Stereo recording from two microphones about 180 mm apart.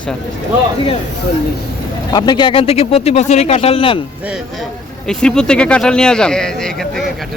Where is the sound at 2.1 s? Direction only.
25° left (ahead or behind).